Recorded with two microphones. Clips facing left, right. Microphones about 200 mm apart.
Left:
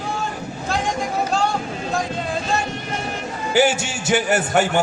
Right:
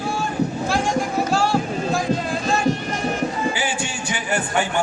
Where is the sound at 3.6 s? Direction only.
75° left (ahead or behind).